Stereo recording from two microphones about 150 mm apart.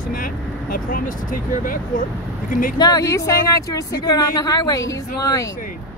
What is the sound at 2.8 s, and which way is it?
A woman's voice, 25° left (ahead or behind).